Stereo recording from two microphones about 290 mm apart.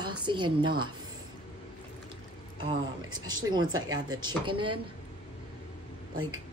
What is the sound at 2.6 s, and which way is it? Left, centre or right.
Speech, centre.